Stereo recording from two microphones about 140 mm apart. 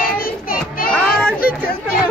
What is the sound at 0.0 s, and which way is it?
Child singing, 90° left.